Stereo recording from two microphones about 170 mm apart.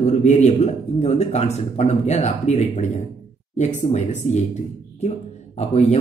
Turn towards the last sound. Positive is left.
turn(degrees=40)  # may be behind; listen again after turning